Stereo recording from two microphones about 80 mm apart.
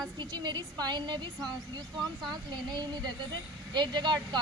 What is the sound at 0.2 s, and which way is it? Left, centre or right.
A woman's voice, right.